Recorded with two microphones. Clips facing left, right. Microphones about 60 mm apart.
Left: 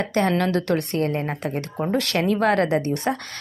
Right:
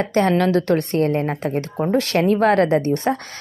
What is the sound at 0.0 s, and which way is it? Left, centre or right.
A woman's voice, right.